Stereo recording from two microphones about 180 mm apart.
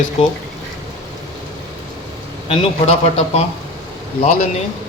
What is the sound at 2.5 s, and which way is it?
A man's voice, 35° left (ahead or behind).